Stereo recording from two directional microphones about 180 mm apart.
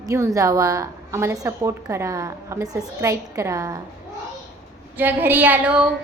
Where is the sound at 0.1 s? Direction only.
15° right (ahead or behind).